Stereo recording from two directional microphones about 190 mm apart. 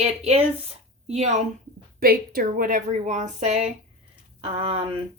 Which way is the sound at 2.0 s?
50° right (ahead or behind).